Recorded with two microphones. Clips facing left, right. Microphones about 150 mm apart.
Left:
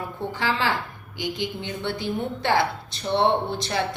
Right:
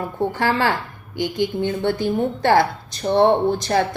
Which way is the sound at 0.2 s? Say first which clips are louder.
Right 6 dB; 50° right (ahead or behind).